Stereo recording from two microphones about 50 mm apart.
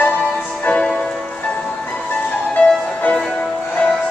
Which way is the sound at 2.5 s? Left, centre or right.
Left.